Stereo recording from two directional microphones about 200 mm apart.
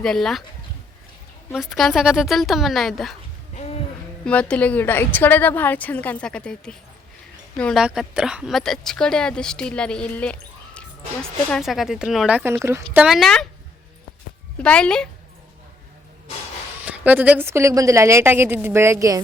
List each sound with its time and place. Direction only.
0.0 s a woman's voice: centre (ahead or behind)
1.5 s a woman's voice: centre (ahead or behind)
3.5 s a sound: 35° left (ahead or behind)
4.3 s a woman's voice: 5° left (ahead or behind)
14.6 s a woman's voice: 5° left (ahead or behind)
16.8 s a woman's voice: 5° right (ahead or behind)